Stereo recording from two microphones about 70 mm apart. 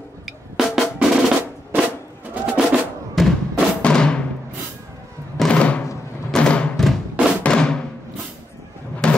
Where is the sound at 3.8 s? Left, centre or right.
Centre.